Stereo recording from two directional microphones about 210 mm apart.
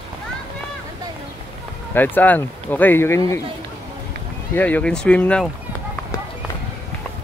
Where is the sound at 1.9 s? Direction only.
10° left (ahead or behind).